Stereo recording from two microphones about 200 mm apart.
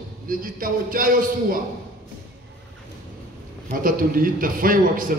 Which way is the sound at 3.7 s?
45° right (ahead or behind).